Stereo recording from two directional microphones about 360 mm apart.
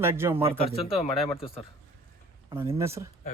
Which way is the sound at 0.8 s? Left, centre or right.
Centre.